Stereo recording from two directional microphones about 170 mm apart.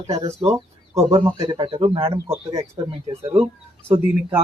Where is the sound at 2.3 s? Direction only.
20° right (ahead or behind).